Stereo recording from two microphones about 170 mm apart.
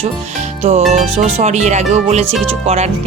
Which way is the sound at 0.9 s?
45° right (ahead or behind).